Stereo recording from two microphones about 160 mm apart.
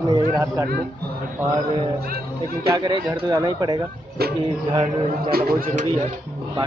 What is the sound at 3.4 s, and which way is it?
Speech, 25° right (ahead or behind).